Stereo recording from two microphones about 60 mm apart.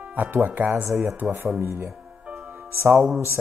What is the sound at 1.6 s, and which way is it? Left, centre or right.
Speech, right.